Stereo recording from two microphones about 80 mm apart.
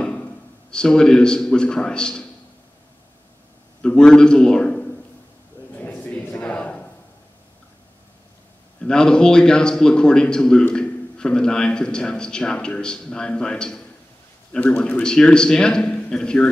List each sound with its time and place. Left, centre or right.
0.0 s a man's voice: centre
3.8 s a man's voice: centre
5.8 s a sound: left
8.8 s a man's voice: centre